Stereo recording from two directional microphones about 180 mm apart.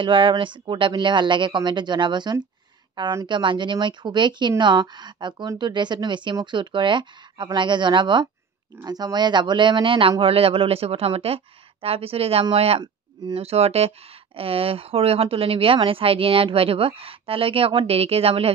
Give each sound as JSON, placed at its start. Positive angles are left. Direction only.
{"t": 0.0, "sound": "speech", "side_deg": -25}